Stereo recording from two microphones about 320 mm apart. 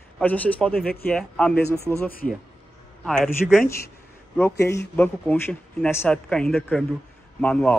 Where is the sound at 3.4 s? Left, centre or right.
Left.